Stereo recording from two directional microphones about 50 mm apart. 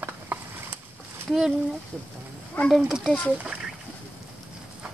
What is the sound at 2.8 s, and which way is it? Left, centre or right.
Speech, centre.